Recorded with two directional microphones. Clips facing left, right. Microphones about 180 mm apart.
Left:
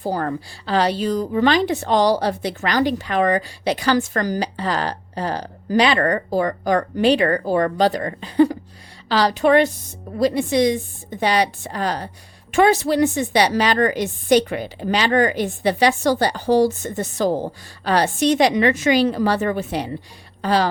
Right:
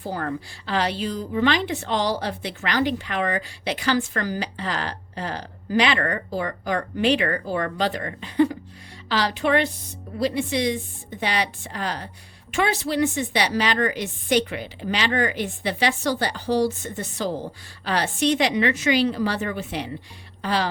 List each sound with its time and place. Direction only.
0.0 s a woman's voice: 35° left (ahead or behind)